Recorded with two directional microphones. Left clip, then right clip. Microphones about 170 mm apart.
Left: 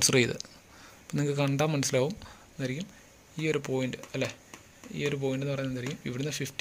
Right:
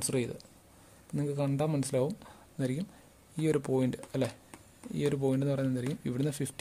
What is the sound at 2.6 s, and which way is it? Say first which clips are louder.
Speech: even; 25° right (ahead or behind).